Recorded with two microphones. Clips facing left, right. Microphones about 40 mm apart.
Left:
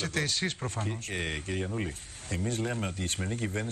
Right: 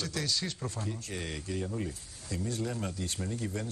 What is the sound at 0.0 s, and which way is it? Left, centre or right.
Speech, left.